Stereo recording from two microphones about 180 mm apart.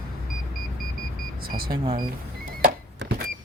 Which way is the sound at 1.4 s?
55° right (ahead or behind).